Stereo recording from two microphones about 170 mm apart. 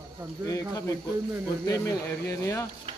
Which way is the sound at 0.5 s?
20° left (ahead or behind).